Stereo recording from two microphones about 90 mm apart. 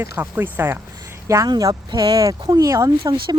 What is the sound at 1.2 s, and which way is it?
Speech, 35° right (ahead or behind).